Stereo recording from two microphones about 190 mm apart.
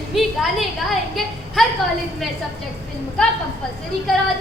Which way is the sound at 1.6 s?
Centre (ahead or behind).